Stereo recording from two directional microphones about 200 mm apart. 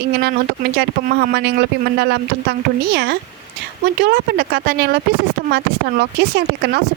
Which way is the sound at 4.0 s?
50° right (ahead or behind).